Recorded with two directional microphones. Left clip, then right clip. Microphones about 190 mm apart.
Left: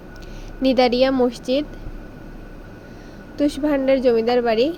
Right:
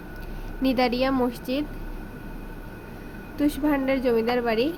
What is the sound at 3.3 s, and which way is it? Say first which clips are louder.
A woman's voice: left 4 dB; 15° left (ahead or behind).